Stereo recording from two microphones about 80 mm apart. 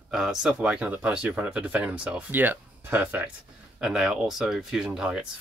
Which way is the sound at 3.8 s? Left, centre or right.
Centre.